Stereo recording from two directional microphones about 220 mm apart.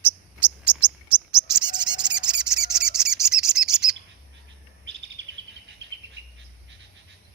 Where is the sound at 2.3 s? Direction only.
5° right (ahead or behind).